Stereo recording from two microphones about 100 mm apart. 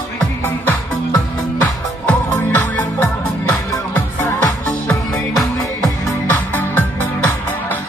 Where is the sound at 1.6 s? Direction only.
15° left (ahead or behind).